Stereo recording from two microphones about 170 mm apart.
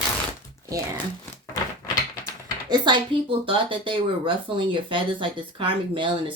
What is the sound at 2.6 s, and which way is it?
Speech, 25° right (ahead or behind).